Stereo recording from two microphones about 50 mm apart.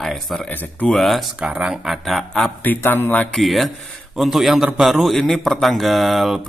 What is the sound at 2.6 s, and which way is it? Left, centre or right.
Speech, left.